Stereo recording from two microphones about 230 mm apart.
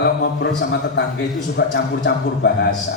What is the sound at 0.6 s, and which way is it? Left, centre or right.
A man's voice, left.